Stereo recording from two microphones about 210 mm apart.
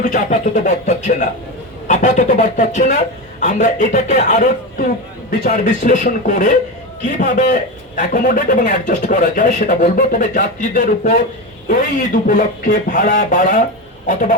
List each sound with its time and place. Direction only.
0.0 s a man's voice: 35° left (ahead or behind)